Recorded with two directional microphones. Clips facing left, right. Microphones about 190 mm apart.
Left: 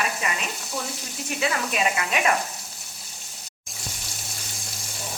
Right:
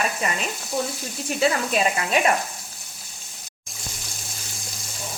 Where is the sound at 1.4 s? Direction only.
35° right (ahead or behind).